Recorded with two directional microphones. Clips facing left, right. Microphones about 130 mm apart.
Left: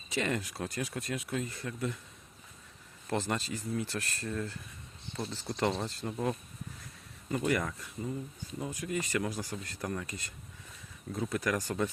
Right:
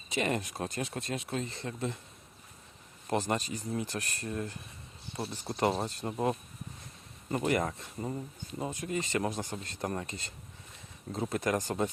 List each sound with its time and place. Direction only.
0.1 s speech: 20° right (ahead or behind)
3.1 s speech: 20° right (ahead or behind)
5.5 s speech: 25° right (ahead or behind)
7.4 s speech: 25° right (ahead or behind)